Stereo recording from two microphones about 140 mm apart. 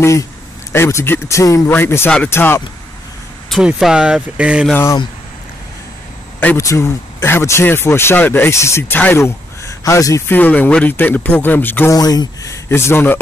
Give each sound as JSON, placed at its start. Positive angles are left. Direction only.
{"t": 0.0, "sound": "speech", "side_deg": 20}
{"t": 3.4, "sound": "speech", "side_deg": 0}
{"t": 6.4, "sound": "speech", "side_deg": 20}
{"t": 11.9, "sound": "speech", "side_deg": 25}